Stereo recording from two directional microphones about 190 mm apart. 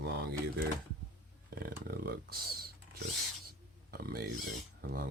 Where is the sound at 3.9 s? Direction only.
55° right (ahead or behind).